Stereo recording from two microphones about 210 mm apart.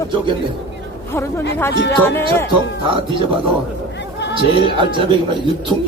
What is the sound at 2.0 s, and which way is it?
Speech, 10° left (ahead or behind).